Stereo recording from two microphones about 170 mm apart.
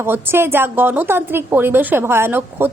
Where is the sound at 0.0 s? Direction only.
15° right (ahead or behind).